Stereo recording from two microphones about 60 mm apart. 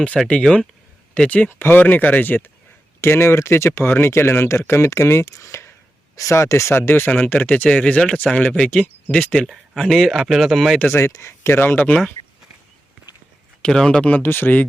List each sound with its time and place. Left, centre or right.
0.4 s speech: centre
1.1 s speech: left
1.5 s speech: left
3.0 s speech: left
7.3 s speech: left
9.5 s speech: centre
10.8 s speech: left
13.6 s speech: centre
14.0 s speech: left